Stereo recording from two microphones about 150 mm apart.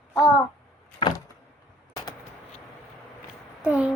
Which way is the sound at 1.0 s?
30° left (ahead or behind).